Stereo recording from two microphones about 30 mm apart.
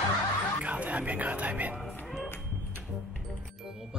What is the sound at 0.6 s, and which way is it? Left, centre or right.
Speech, right.